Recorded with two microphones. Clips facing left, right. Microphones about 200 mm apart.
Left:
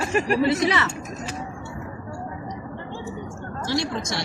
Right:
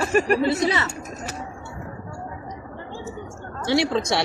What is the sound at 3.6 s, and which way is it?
Speech, 65° right (ahead or behind).